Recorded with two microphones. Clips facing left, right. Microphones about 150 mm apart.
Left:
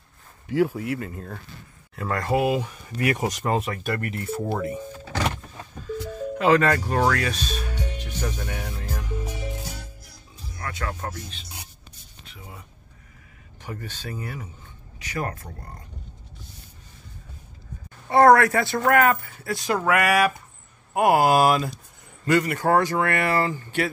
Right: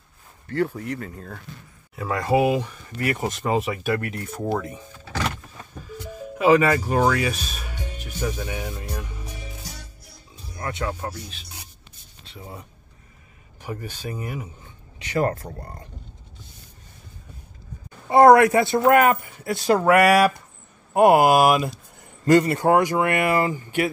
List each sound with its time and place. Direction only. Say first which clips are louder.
0.5 s speech: left 2 dB; 10° left (ahead or behind)
3.0 s speech: left 1 dB; 15° left (ahead or behind)
3.4 s speech: right 4 dB; centre (ahead or behind)
6.3 s speech: right 2 dB; 10° right (ahead or behind)
10.0 s music: even; 25° right (ahead or behind)
10.9 s speech: right 2 dB; 5° right (ahead or behind)
12.3 s speech: right 5 dB; 30° right (ahead or behind)
13.6 s speech: right 3 dB; 15° right (ahead or behind)
15.0 s speech: right 7 dB; 30° right (ahead or behind)
18.1 s speech: right 3 dB; 15° right (ahead or behind)
21.2 s speech: right 2 dB; 10° right (ahead or behind)
22.2 s speech: right 5 dB; 30° right (ahead or behind)
22.7 s speech: right 1 dB; 15° right (ahead or behind)